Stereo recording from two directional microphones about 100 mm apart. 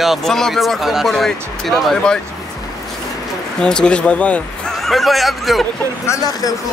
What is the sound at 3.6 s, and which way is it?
Speech, 10° left (ahead or behind).